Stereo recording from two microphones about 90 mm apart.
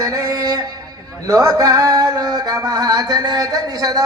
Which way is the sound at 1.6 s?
40° right (ahead or behind).